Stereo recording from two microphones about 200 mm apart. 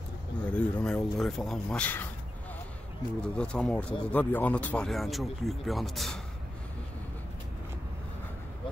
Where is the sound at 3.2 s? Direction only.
5° left (ahead or behind).